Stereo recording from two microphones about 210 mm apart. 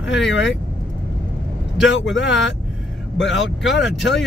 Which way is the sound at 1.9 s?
60° left (ahead or behind).